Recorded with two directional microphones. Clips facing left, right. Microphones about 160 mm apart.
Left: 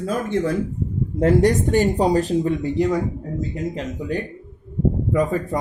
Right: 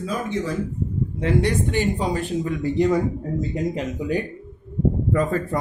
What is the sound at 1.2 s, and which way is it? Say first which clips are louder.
Speech: left 5 dB; 45° left (ahead or behind).